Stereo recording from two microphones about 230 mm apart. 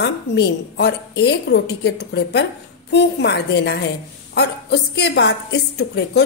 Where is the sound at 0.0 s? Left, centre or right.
Left.